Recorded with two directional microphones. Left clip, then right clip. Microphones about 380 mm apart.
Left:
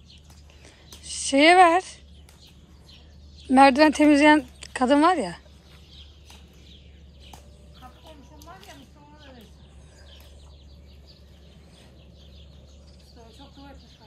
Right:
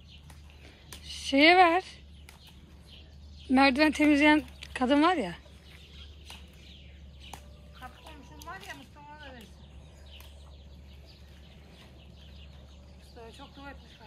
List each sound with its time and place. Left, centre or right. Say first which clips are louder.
0.8 s a sound: left 5 dB; centre
3.4 s speech: left 8 dB; centre
8.4 s snake: right 5 dB; centre